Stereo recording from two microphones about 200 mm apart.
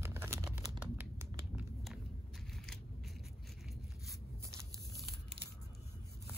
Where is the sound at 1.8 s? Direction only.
Centre (ahead or behind).